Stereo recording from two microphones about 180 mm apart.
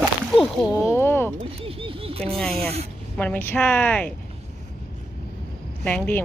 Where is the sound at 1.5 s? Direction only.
30° right (ahead or behind).